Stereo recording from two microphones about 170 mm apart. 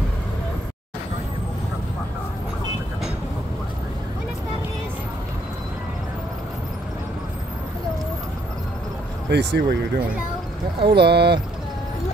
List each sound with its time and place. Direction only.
9.3 s speech: 90° right; by 11.3 s 75° right (ahead or behind)